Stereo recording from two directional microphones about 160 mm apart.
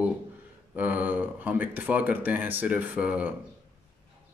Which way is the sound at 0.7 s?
10° right (ahead or behind).